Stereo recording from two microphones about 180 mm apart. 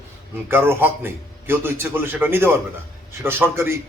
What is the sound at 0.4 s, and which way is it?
A man's voice, 15° right (ahead or behind).